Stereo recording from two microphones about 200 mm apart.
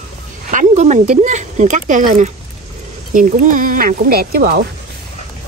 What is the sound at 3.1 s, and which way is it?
Speech, 40° right (ahead or behind).